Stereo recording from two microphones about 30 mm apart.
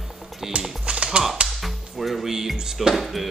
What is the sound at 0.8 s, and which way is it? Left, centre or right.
Tap, right.